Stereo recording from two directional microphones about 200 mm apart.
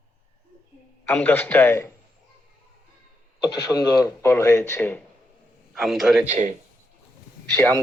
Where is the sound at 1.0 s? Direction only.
5° left (ahead or behind).